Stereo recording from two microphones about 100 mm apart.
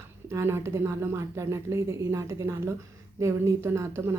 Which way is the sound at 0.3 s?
25° right (ahead or behind).